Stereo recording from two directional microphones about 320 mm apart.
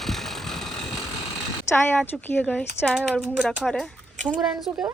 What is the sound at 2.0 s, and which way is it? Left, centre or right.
A woman's voice, centre.